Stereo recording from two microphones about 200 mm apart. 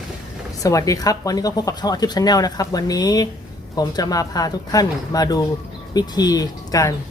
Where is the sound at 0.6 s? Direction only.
15° left (ahead or behind).